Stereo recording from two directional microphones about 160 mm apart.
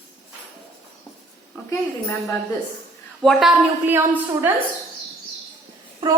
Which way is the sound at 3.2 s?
Centre (ahead or behind).